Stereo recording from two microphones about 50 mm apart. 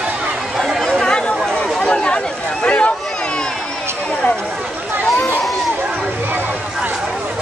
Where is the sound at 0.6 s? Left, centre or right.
Centre.